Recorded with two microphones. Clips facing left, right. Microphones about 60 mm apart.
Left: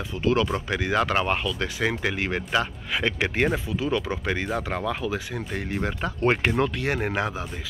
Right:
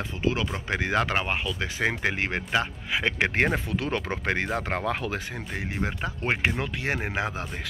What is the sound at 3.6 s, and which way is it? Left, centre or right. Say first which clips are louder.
Speech: left 2 dB; right.